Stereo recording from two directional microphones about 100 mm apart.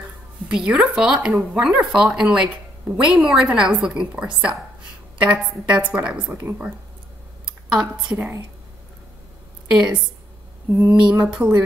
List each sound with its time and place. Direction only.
0.5 s speech: 5° right (ahead or behind)
5.8 s speech: 15° right (ahead or behind)
7.4 s speech: 10° right (ahead or behind)
9.7 s a woman's voice: 10° right (ahead or behind)